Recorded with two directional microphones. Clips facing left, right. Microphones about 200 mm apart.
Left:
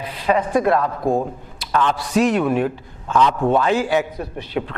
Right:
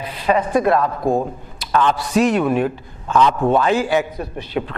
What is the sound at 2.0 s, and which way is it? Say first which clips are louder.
A man's voice: right 1 dB; 10° right (ahead or behind).